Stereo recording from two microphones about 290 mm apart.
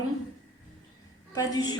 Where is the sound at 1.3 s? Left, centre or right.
Centre.